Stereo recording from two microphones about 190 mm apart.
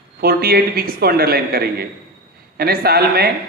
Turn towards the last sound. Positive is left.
turn(degrees=-55)  # may be behind; listen again after turning